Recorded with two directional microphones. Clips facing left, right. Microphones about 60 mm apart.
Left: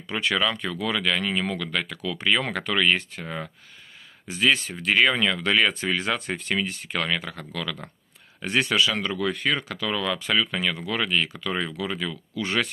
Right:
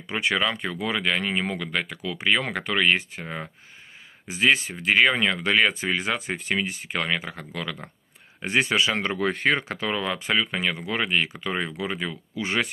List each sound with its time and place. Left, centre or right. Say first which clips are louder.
0.1 s speech: even; centre